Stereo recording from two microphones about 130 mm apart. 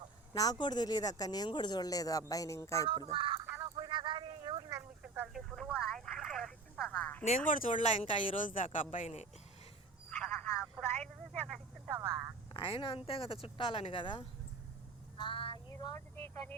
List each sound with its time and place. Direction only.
0.3 s speech: 30° left (ahead or behind)
2.8 s speech: 40° right (ahead or behind)
3.8 s a sound: 40° right (ahead or behind)
5.0 s telephone: 10° right (ahead or behind)
6.9 s a sound: 10° left (ahead or behind)
7.3 s speech: 85° left; by 9.2 s 70° left (ahead or behind)
10.1 s telephone: 10° left (ahead or behind)
12.5 s speech: 40° left (ahead or behind)
13.9 s female singing: 40° left (ahead or behind)
15.7 s vehicle: 30° left (ahead or behind)
16.0 s a woman's voice: 15° left (ahead or behind)